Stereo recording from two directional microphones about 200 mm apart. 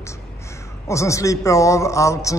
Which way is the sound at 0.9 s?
15° left (ahead or behind).